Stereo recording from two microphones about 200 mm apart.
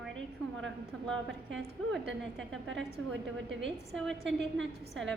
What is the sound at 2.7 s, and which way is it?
Speech, 65° right (ahead or behind).